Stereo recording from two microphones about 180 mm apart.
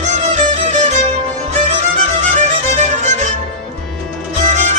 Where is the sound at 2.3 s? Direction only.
45° right (ahead or behind).